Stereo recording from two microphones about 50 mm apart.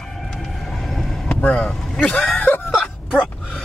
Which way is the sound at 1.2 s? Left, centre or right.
Left.